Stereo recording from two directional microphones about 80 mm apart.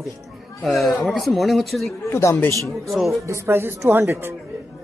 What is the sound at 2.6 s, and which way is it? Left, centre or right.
Speech, centre.